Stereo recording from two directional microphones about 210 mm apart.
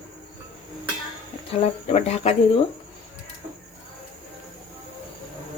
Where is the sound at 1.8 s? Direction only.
30° left (ahead or behind).